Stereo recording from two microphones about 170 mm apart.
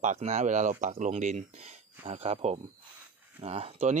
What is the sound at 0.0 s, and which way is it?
Speech, 40° right (ahead or behind).